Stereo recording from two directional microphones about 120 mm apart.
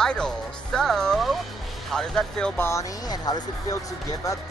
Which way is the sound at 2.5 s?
25° left (ahead or behind).